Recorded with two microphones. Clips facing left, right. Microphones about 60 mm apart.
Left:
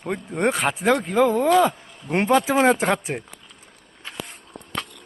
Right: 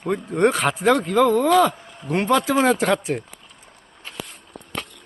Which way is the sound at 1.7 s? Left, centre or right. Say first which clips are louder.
Right 1 dB; left.